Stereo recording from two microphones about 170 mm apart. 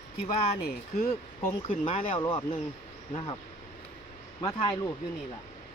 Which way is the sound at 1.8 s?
30° left (ahead or behind).